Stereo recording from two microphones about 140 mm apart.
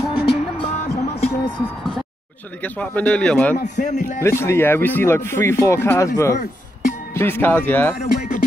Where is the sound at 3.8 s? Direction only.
60° left (ahead or behind).